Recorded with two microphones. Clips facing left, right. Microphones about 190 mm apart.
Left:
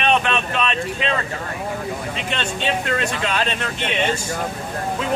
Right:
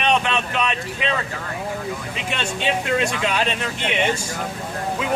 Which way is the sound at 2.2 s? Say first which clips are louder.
Right 1 dB; 10° right (ahead or behind).